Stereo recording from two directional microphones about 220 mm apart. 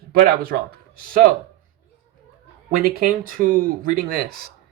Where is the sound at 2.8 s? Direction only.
40° right (ahead or behind).